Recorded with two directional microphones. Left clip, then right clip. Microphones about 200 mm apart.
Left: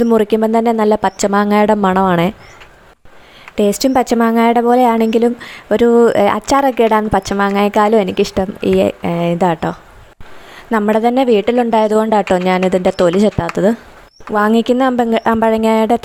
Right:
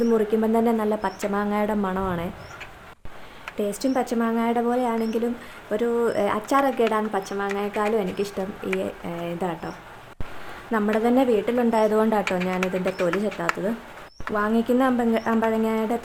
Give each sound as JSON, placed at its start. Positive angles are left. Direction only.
{"t": 0.1, "sound": "a woman's voice", "side_deg": 45}
{"t": 3.5, "sound": "a woman's voice", "side_deg": 45}